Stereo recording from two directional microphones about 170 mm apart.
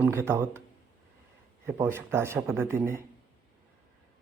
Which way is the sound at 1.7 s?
15° right (ahead or behind).